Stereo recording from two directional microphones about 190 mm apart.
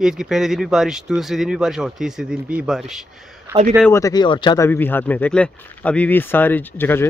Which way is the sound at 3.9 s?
20° left (ahead or behind).